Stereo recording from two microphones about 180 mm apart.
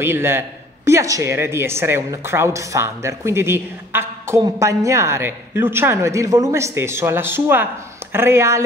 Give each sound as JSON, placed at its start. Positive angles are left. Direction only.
{"t": 0.0, "sound": "speech", "side_deg": -15}